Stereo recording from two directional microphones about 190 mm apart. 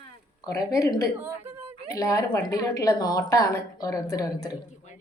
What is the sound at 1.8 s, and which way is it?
A woman's voice, 15° left (ahead or behind).